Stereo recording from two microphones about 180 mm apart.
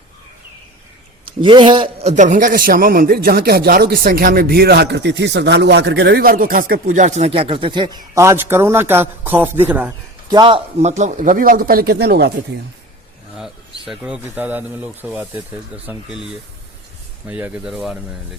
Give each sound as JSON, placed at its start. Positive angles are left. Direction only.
{"t": 1.4, "sound": "a man's voice", "side_deg": -25}
{"t": 10.3, "sound": "a man's voice", "side_deg": -30}
{"t": 13.3, "sound": "speech", "side_deg": -5}